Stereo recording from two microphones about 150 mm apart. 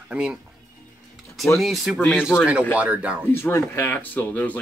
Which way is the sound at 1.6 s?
Centre (ahead or behind).